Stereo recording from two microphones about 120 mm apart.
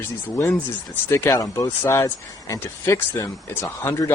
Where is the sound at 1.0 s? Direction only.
20° left (ahead or behind).